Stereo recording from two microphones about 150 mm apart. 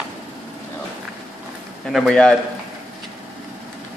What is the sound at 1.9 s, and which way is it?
Speech, centre (ahead or behind).